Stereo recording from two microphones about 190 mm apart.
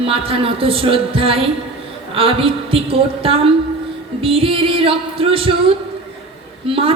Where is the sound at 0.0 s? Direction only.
30° right (ahead or behind).